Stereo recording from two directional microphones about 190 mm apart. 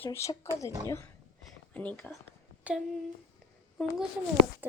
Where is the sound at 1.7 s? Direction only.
5° left (ahead or behind).